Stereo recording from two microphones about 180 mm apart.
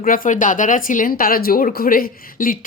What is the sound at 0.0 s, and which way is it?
A woman's voice, 50° left (ahead or behind).